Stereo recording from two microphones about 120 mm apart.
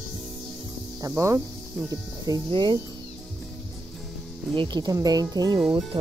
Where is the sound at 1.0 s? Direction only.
25° right (ahead or behind).